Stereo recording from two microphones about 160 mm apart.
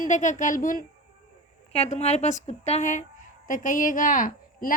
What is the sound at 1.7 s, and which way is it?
A woman's voice, 40° left (ahead or behind).